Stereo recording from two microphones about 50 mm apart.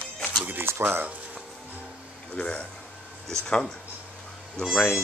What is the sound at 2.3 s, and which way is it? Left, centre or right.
Speech, left.